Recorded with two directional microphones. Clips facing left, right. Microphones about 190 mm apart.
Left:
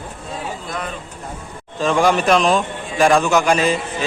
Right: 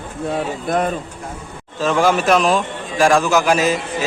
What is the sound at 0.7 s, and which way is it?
Speech, 50° right (ahead or behind).